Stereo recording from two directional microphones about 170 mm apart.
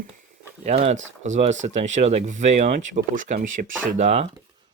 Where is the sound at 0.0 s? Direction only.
45° right (ahead or behind).